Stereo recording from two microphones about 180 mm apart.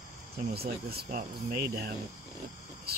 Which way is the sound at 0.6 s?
60° right (ahead or behind).